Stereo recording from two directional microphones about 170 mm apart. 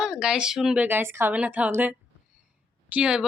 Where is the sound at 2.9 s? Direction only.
5° right (ahead or behind).